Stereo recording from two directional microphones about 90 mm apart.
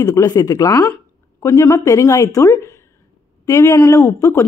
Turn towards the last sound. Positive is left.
turn(degrees=35)  # may be behind; listen again after turning